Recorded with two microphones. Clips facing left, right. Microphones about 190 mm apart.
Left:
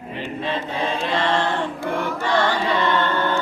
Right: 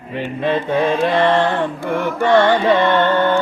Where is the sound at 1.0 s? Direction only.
55° right (ahead or behind).